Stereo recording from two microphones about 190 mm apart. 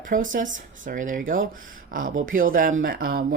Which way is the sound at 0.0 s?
45° right (ahead or behind).